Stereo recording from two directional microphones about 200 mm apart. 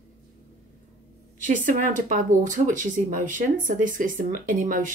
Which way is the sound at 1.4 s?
40° right (ahead or behind).